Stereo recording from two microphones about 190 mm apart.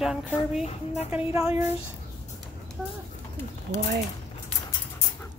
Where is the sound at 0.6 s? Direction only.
35° left (ahead or behind).